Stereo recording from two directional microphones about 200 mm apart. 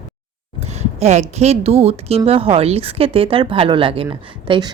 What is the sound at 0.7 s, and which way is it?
A woman's voice, 35° right (ahead or behind).